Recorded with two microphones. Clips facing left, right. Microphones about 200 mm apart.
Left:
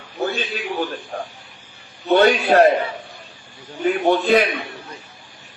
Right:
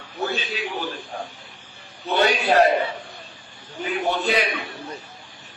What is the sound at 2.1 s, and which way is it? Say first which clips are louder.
Speech: left 4 dB; 50° left (ahead or behind).